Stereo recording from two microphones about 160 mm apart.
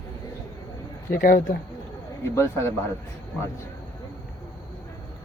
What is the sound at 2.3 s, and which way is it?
Speech, 20° left (ahead or behind).